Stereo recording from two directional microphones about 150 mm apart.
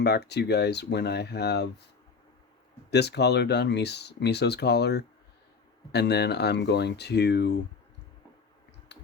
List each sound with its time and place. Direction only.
0.0 s speech: 90° left
2.9 s speech: 90° left